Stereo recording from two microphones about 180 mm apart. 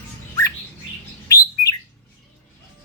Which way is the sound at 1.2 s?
20° left (ahead or behind).